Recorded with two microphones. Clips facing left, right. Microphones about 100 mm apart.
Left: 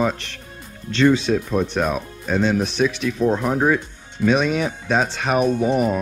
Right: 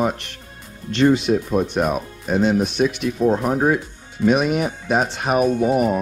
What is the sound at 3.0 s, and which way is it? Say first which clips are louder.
Speech: right 1 dB; 40° right (ahead or behind).